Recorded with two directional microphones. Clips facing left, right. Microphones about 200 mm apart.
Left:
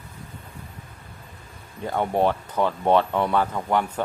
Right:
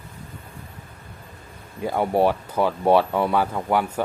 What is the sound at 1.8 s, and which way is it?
Speech, 10° right (ahead or behind).